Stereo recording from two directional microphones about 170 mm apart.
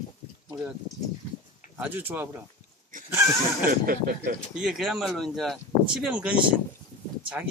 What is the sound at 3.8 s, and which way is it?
Speech, 60° right (ahead or behind).